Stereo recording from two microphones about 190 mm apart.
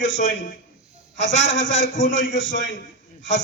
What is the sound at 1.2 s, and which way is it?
A man's voice, 80° left.